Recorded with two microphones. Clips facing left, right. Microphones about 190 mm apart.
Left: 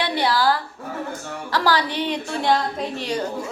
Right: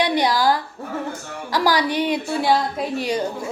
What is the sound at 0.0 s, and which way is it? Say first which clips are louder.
A woman's voice: right 2 dB; 15° right (ahead or behind).